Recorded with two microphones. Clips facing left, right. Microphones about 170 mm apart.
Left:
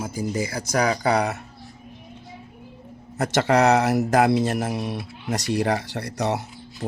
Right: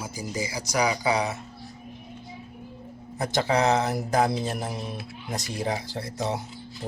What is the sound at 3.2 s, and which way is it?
Speech, 80° left.